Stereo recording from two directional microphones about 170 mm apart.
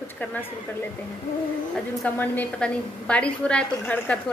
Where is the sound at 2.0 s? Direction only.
10° left (ahead or behind).